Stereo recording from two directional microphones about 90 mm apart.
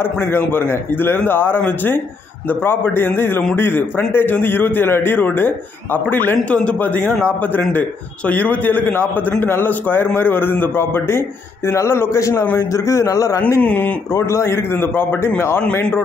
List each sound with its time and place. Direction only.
0.3 s a man's voice: 25° left (ahead or behind)
13.6 s speech: 15° left (ahead or behind)
14.1 s a man's voice: 30° left (ahead or behind)